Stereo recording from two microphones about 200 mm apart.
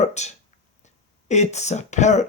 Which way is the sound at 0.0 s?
35° left (ahead or behind).